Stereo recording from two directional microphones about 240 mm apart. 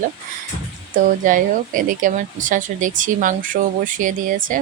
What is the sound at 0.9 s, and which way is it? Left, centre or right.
Speech, right.